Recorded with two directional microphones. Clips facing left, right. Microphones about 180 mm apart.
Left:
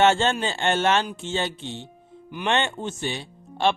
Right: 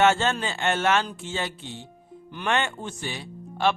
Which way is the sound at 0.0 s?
30° left (ahead or behind).